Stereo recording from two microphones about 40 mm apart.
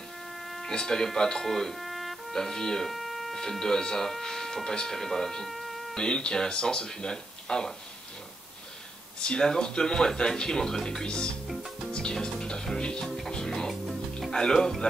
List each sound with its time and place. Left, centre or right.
0.6 s speech: centre
2.9 s a sound: centre
3.4 s speech: centre
5.5 s music: centre
5.9 s speech: centre
9.2 s speech: centre
11.9 s music: centre
13.0 s music: centre
14.3 s speech: centre